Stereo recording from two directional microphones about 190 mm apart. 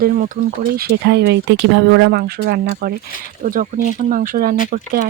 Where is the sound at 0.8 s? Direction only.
60° right (ahead or behind).